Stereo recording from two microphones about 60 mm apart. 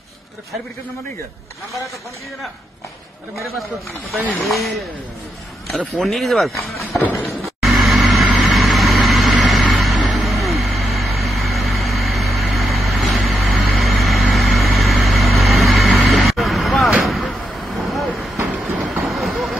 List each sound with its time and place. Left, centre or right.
4.4 s speech: centre
5.9 s speech: centre
7.6 s vehicle: centre
18.9 s train: centre